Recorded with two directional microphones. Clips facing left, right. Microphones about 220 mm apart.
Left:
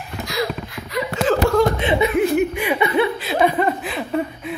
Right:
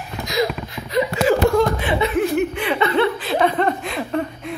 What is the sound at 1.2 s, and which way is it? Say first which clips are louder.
Chuckle: even; 10° right (ahead or behind).